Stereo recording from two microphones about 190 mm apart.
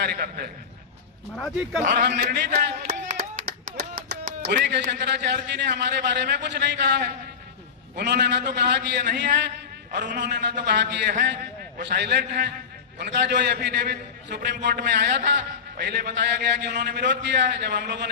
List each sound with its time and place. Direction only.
0.0 s a man's voice: 55° right (ahead or behind)
2.0 s a man's voice: 65° right (ahead or behind)
3.1 s a sound: 45° right (ahead or behind)
4.9 s a man's voice: 60° right (ahead or behind)